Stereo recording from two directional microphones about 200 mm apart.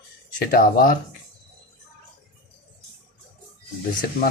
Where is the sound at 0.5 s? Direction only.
45° left (ahead or behind).